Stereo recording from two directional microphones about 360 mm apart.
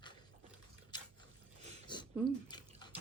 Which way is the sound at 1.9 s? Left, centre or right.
Centre.